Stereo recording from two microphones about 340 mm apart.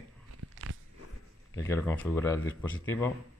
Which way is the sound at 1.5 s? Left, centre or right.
Centre.